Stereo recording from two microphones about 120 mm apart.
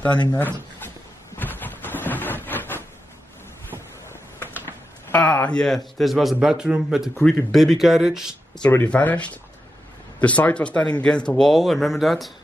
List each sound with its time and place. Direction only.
0.0 s speech: 10° left (ahead or behind)
0.3 s a sound: 15° left (ahead or behind)
4.4 s speech: 15° left (ahead or behind); by 8.3 s 5° right (ahead or behind)
8.5 s speech: 10° left (ahead or behind)